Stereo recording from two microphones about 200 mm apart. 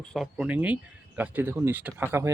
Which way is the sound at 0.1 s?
Centre (ahead or behind).